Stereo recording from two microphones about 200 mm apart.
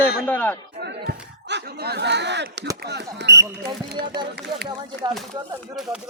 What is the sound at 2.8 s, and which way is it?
Speech, 55° right (ahead or behind).